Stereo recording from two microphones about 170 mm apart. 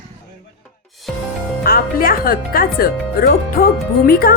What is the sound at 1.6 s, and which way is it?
Speech, 60° left (ahead or behind).